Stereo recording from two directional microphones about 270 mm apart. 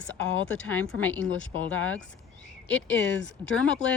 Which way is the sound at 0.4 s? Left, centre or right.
Centre.